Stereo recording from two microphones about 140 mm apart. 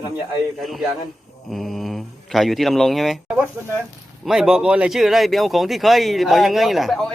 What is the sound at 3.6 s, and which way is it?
Speech, 15° right (ahead or behind).